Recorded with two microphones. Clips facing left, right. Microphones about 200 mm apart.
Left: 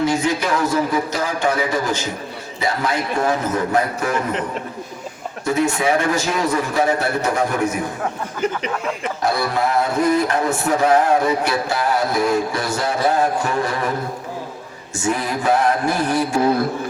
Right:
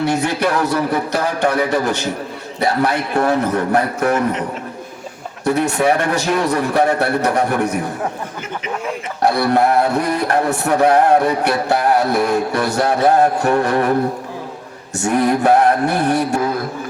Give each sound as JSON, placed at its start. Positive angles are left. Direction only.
{"t": 0.0, "sound": "music", "side_deg": -65}
{"t": 5.5, "sound": "music", "side_deg": -65}
{"t": 9.2, "sound": "music", "side_deg": -65}
{"t": 14.9, "sound": "music", "side_deg": -65}